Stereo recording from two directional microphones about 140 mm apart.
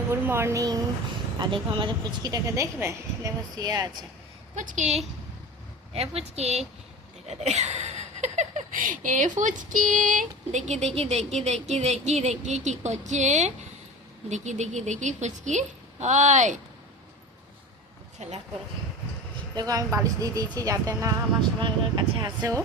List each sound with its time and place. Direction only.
0.1 s speech: 20° right (ahead or behind)
1.4 s speech: 35° right (ahead or behind)
4.5 s a woman's voice: 65° right (ahead or behind)
18.2 s speech: 55° right (ahead or behind)
19.5 s speech: 25° right (ahead or behind)